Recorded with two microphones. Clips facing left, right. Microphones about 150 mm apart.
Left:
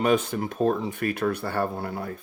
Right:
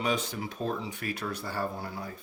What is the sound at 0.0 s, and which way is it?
Speech, 55° left (ahead or behind).